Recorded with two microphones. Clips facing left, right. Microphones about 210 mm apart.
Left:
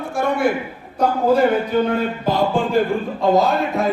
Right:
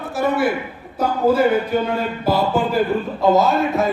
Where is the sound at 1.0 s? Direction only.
5° right (ahead or behind).